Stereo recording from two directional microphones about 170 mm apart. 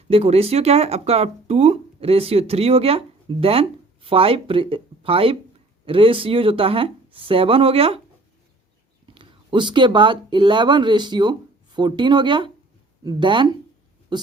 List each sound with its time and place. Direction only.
0.1 s speech: 35° right (ahead or behind)
9.1 s speech: 30° right (ahead or behind)